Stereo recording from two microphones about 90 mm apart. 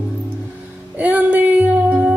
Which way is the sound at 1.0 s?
15° right (ahead or behind).